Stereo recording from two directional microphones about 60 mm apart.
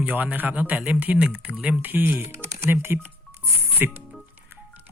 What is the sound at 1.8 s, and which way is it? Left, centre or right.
Speech, right.